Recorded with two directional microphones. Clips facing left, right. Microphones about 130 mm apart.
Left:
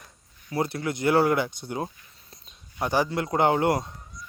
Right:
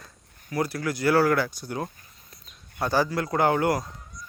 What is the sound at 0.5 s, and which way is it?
Speech, 25° left (ahead or behind).